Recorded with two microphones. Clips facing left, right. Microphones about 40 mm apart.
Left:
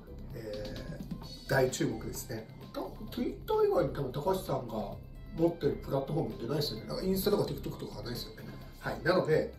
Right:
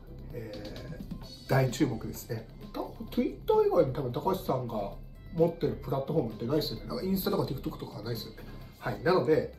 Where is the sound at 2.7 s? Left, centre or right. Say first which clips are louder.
Right 6 dB; right.